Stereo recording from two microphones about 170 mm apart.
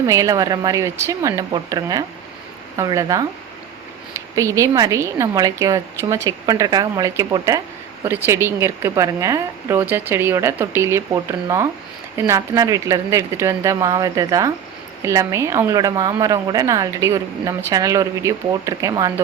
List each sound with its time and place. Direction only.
0.1 s a woman's voice: 20° right (ahead or behind)
4.4 s a woman's voice: 20° right (ahead or behind)